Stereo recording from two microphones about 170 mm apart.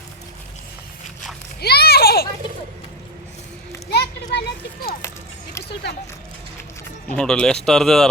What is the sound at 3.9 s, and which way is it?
Children playing, 70° left (ahead or behind).